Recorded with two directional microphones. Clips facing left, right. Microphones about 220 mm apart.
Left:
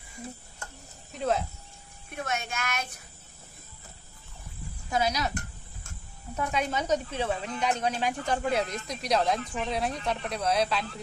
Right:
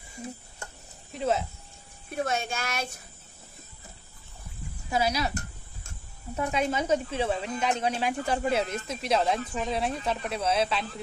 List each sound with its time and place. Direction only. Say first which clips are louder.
1.1 s snake: right 1 dB; centre (ahead or behind)
2.0 s speech: right 4 dB; 30° right (ahead or behind)
4.9 s speech: right 1 dB; 5° right (ahead or behind)
6.3 s speech: right 2 dB; 10° right (ahead or behind)